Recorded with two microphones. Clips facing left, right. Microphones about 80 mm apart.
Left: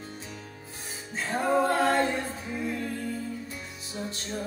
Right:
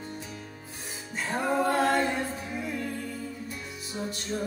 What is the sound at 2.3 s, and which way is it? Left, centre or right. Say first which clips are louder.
Music: left 1 dB; left.